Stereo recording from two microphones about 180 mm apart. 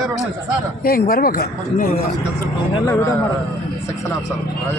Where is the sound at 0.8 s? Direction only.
55° left (ahead or behind).